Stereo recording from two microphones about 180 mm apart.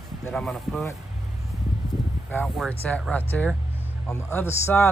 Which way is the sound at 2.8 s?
10° left (ahead or behind).